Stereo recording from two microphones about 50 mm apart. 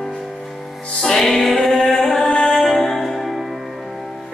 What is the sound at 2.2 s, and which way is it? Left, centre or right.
Music, centre.